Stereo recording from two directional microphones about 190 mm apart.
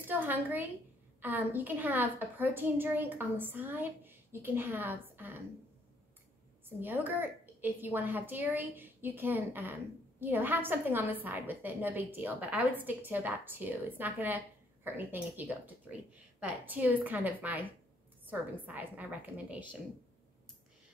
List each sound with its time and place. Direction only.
0.1 s a woman's voice: 10° right (ahead or behind)
6.8 s a woman's voice: 10° right (ahead or behind)